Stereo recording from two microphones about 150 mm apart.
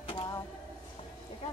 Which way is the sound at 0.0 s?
35° left (ahead or behind).